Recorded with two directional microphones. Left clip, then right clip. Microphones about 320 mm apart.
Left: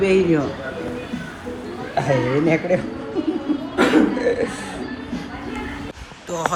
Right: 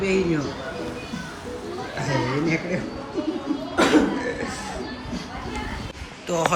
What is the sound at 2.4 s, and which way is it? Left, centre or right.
Speech, left.